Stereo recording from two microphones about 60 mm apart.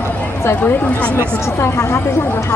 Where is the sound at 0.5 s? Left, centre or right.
Left.